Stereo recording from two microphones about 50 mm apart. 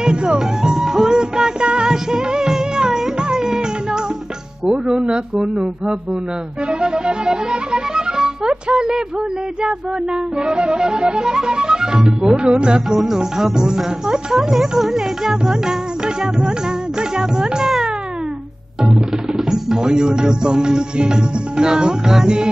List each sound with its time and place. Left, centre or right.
0.0 s music: centre
4.6 s speech: centre
10.4 s music: centre
12.9 s music: centre
17.2 s speech: centre
18.8 s music: centre